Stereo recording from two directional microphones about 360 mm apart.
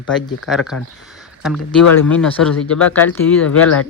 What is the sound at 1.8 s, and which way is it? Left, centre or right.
Speech, left.